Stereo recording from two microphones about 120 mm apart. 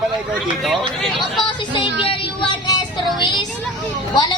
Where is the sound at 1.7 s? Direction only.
45° left (ahead or behind).